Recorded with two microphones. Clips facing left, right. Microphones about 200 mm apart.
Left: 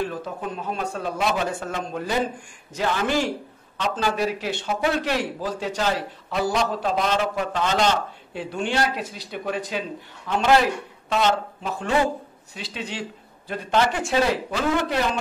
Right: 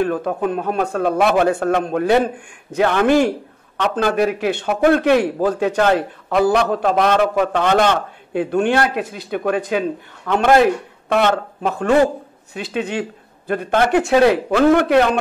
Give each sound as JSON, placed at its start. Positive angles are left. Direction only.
{"t": 0.0, "sound": "speech", "side_deg": -60}